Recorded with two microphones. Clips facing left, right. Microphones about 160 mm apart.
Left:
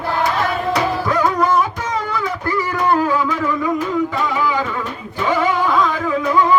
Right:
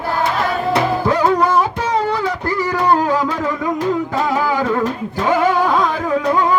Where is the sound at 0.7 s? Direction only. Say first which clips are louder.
Right 4 dB; 35° right (ahead or behind).